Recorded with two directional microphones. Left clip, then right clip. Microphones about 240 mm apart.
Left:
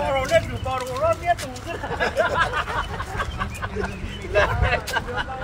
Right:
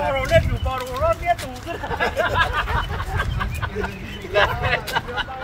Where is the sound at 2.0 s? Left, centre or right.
Centre.